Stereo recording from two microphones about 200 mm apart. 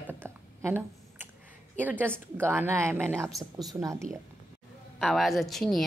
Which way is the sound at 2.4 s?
10° right (ahead or behind).